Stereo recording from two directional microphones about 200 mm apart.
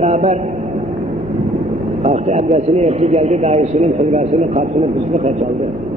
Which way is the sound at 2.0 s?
35° right (ahead or behind).